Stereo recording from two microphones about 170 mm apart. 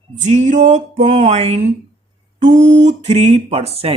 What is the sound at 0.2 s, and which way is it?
Speech, 45° right (ahead or behind).